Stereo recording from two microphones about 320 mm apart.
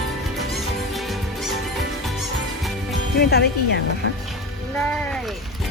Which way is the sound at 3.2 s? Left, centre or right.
Left.